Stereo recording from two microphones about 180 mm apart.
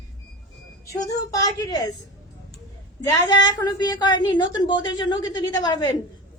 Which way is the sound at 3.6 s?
20° left (ahead or behind).